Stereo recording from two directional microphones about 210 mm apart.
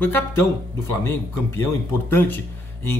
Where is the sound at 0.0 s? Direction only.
10° left (ahead or behind).